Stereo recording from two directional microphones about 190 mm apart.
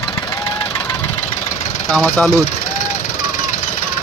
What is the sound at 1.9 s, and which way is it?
Speech, 5° left (ahead or behind).